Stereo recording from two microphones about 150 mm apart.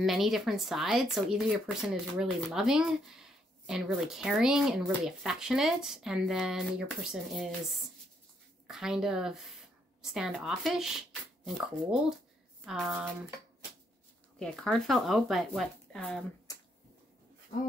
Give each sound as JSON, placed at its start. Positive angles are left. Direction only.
{"t": 0.0, "sound": "speech", "side_deg": 0}
{"t": 14.4, "sound": "speech", "side_deg": 5}
{"t": 16.5, "sound": "a sound", "side_deg": 25}